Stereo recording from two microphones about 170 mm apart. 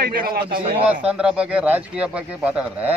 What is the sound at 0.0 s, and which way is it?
Speech, 60° right (ahead or behind).